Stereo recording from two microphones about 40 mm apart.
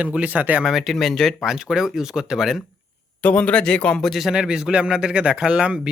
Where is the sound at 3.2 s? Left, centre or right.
Left.